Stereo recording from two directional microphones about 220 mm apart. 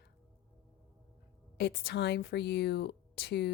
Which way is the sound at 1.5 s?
50° left (ahead or behind).